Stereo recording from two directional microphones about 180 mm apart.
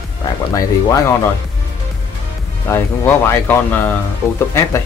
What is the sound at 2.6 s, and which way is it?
Speech, 10° left (ahead or behind).